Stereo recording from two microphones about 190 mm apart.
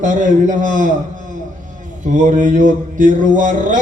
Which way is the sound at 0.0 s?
45° right (ahead or behind).